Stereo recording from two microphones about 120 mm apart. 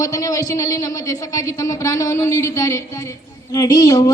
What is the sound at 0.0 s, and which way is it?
A man's voice, 30° left (ahead or behind).